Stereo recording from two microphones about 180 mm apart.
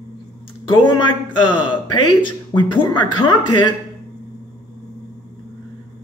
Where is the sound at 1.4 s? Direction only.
25° left (ahead or behind).